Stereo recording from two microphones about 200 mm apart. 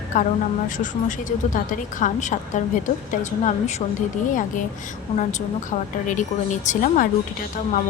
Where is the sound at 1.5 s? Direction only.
40° left (ahead or behind).